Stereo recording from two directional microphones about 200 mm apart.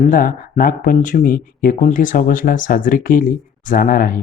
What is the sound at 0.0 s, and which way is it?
Speech, 45° left (ahead or behind).